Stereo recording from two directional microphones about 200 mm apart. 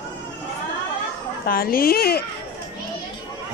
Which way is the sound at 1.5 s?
45° left (ahead or behind).